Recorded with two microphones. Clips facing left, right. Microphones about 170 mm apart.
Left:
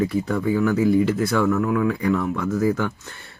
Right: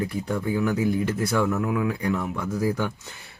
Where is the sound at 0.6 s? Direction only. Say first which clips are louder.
Left 4 dB; 10° right (ahead or behind).